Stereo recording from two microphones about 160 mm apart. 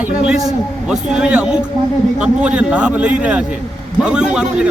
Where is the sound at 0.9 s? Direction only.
5° right (ahead or behind).